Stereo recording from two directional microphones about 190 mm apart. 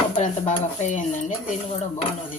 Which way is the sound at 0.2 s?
35° left (ahead or behind).